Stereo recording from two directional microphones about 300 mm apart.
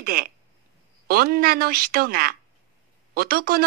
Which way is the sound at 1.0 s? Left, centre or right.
Right.